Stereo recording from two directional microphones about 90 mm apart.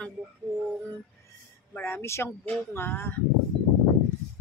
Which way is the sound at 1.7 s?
25° left (ahead or behind).